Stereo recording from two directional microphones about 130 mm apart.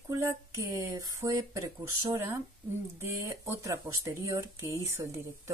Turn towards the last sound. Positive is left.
turn(degrees=-25)  # may be behind; listen again after turning